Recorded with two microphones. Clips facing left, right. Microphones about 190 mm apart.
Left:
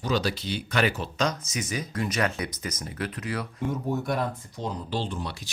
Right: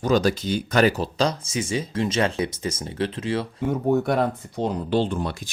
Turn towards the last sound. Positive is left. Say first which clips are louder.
# right 8 dB
turn(degrees=-55)  # may be behind; listen again after turning